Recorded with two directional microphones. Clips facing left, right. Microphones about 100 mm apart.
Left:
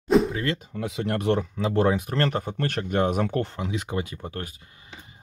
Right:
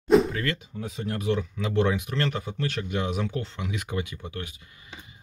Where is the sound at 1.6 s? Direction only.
35° left (ahead or behind); by 3.5 s 55° left (ahead or behind).